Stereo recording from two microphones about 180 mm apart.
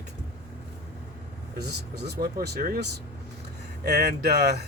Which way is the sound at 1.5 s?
65° right (ahead or behind).